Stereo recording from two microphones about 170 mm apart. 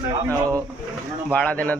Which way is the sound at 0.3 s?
20° right (ahead or behind).